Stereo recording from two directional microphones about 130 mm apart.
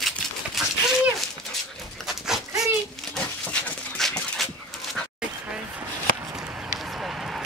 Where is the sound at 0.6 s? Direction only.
Centre (ahead or behind).